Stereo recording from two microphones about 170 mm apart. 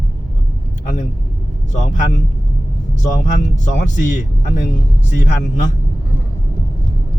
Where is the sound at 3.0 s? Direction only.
45° left (ahead or behind).